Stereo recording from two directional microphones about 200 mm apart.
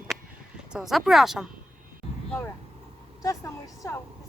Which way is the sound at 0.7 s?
Centre (ahead or behind).